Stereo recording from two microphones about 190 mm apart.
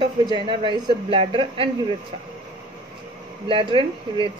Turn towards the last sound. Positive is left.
turn(degrees=-25)  # may be behind; listen again after turning